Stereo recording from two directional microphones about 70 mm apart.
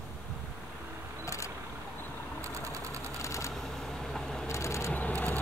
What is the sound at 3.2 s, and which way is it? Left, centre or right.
Typewriter, left.